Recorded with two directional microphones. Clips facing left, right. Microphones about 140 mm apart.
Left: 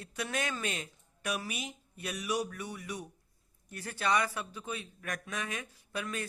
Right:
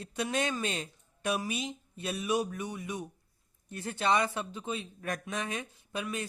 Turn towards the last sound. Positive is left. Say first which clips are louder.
# right 2 dB
turn(degrees=-20)  # may be behind; listen again after turning